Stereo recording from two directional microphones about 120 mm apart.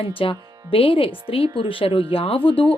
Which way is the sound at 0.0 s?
50° left (ahead or behind).